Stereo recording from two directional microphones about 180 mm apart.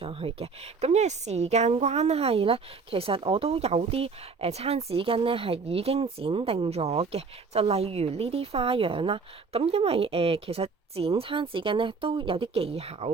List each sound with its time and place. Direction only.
0.0 s speech: 30° right (ahead or behind)